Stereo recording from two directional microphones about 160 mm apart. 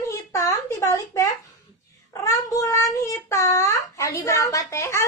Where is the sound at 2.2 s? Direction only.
20° left (ahead or behind).